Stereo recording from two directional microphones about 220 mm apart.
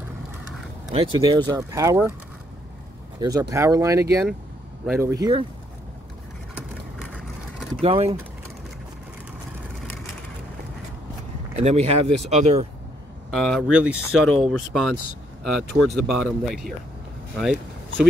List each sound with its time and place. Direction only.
0.9 s speech: 20° right (ahead or behind)
3.2 s speech: 15° right (ahead or behind)
6.5 s vehicle: 5° right (ahead or behind)
7.8 s speech: 25° right (ahead or behind)
11.5 s speech: 30° right (ahead or behind)
13.3 s speech: centre (ahead or behind)
17.4 s vehicle: centre (ahead or behind)